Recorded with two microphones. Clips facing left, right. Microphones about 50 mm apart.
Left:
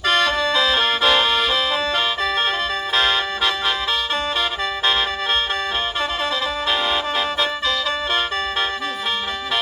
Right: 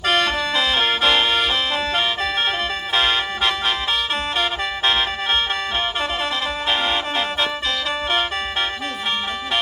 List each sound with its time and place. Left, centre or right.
0.0 s music: right
2.9 s music: right
6.7 s music: right